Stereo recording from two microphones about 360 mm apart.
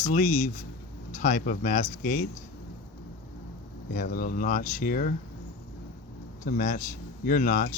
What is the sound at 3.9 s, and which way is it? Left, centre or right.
Speech, left.